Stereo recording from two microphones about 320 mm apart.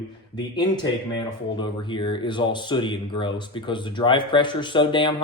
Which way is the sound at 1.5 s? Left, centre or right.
Centre.